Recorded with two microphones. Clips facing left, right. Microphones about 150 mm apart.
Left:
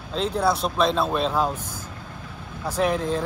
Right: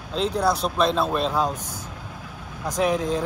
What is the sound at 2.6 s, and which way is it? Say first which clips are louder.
Speech: right 1 dB; 5° left (ahead or behind).